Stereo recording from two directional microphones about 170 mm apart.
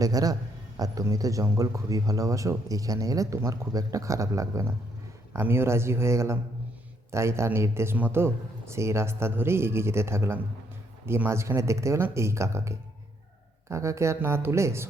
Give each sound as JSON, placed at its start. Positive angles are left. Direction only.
{"t": 0.0, "sound": "a man's voice", "side_deg": -20}